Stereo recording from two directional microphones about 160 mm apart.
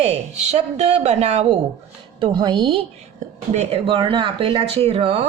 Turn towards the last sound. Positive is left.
turn(degrees=-40)  # may be behind; listen again after turning